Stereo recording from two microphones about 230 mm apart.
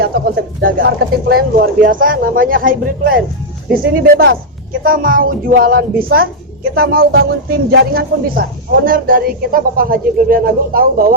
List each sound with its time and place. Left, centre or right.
0.0 s speech: right